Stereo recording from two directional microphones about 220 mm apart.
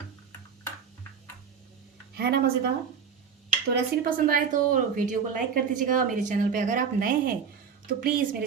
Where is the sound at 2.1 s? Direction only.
45° right (ahead or behind).